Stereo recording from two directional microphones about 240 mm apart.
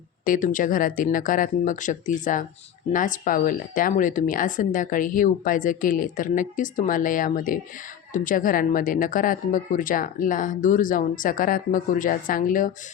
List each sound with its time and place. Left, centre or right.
0.3 s speech: left